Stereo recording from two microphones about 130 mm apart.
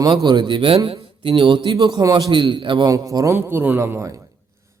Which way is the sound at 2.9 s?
25° right (ahead or behind).